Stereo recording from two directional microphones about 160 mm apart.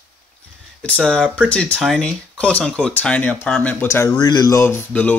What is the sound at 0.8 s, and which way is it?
Speech, 5° left (ahead or behind).